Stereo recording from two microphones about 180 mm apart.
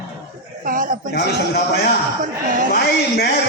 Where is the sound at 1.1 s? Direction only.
65° left (ahead or behind).